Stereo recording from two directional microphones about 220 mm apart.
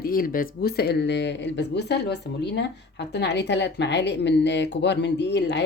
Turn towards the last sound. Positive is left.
turn(degrees=50)  # may be behind; listen again after turning